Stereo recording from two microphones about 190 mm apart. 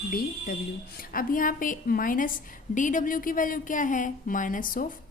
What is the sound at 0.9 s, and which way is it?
A woman's voice, 45° left (ahead or behind).